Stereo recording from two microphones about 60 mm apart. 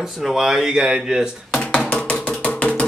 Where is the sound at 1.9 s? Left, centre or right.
Left.